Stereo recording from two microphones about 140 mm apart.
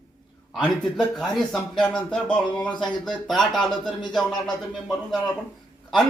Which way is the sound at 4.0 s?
30° left (ahead or behind).